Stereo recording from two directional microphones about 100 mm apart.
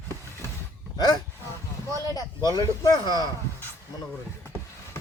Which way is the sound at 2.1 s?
40° left (ahead or behind).